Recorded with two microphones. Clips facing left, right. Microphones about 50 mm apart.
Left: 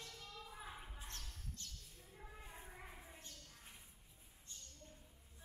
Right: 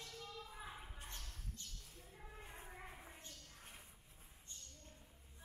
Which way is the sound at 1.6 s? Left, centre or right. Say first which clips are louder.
Even; centre.